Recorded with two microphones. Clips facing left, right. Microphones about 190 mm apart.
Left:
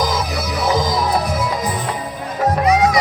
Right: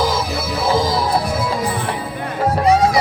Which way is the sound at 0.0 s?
30° right (ahead or behind).